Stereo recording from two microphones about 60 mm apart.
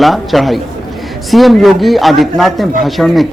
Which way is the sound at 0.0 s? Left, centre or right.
Centre.